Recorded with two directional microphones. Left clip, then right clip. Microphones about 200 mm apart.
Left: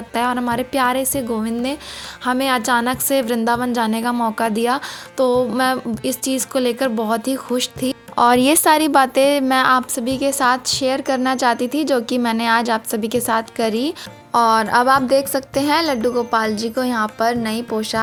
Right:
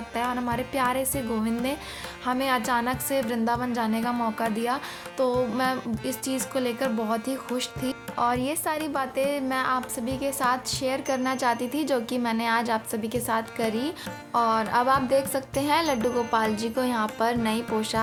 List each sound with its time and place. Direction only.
0.1 s a woman's voice: 40° left (ahead or behind)